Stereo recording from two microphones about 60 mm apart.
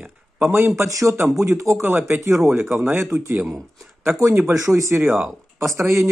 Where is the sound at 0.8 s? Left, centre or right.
Right.